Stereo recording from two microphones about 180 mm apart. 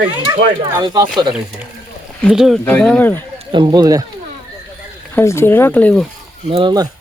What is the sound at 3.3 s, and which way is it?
Speech, 25° right (ahead or behind).